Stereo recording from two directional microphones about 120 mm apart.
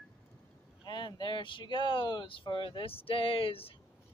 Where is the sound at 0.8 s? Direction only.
40° left (ahead or behind).